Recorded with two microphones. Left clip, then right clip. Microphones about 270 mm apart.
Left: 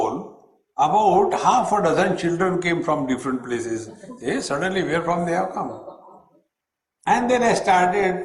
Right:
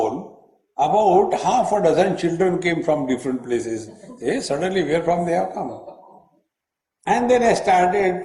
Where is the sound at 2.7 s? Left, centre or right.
Right.